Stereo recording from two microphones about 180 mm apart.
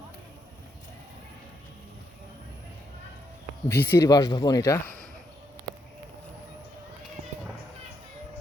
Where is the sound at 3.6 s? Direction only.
10° left (ahead or behind).